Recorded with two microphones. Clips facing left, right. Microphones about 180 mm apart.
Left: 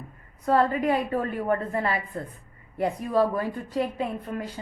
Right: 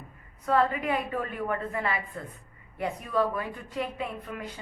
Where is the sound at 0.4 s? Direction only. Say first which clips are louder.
Left 3 dB; 40° left (ahead or behind).